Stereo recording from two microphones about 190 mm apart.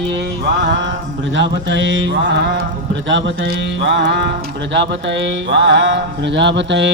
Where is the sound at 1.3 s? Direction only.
70° right (ahead or behind).